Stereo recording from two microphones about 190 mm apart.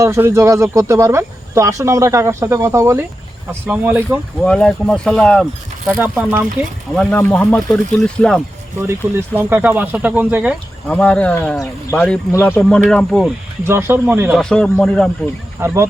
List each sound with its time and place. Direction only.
0.0 s speech: 15° right (ahead or behind)
4.4 s speech: 5° left (ahead or behind)
6.0 s speech: 10° right (ahead or behind)
6.9 s speech: 5° left (ahead or behind)
8.8 s speech: 10° right (ahead or behind)
10.8 s speech: 5° left (ahead or behind)
13.7 s speech: 15° right (ahead or behind)
14.3 s speech: 5° left (ahead or behind)
15.6 s speech: 15° right (ahead or behind)